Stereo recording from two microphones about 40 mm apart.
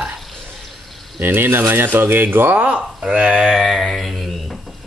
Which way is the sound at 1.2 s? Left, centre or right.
Right.